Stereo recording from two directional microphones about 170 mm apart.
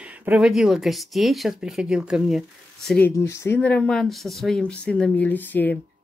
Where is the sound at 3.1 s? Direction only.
15° left (ahead or behind).